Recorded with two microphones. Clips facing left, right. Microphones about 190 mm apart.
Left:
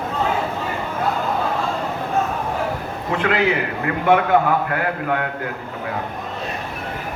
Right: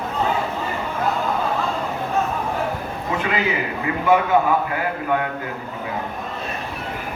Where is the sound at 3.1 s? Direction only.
65° left (ahead or behind).